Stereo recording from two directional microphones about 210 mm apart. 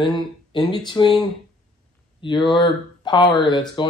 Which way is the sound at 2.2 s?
20° left (ahead or behind).